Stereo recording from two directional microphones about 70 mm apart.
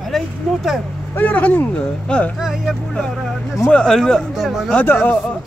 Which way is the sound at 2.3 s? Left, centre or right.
Centre.